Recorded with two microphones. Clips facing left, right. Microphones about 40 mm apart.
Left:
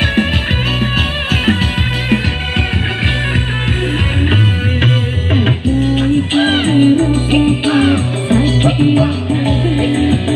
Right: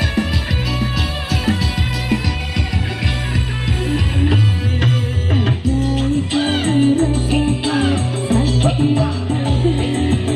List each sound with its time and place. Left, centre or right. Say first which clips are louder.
0.7 s music: left 5 dB; left
4.8 s music: left 3 dB; left